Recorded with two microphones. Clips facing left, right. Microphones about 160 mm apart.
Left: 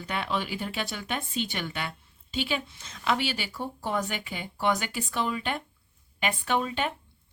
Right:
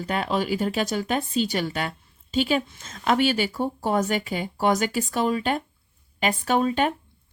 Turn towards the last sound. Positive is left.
turn(degrees=-45)  # may be behind; listen again after turning